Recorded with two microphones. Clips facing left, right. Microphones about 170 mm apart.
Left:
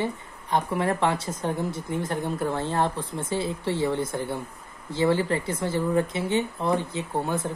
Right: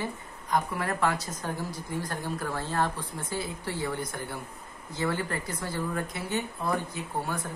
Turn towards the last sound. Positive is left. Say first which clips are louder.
# left 5 dB
turn(degrees=25)  # may be behind; listen again after turning